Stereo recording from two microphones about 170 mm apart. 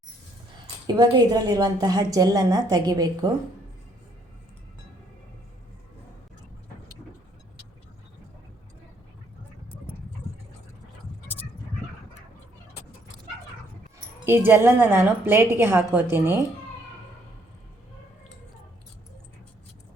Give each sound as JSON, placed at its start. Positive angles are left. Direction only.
{"t": 0.9, "sound": "a woman's voice", "side_deg": -25}
{"t": 14.3, "sound": "a woman's voice", "side_deg": -10}